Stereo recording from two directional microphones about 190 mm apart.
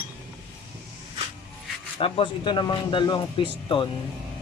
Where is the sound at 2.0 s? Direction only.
30° left (ahead or behind).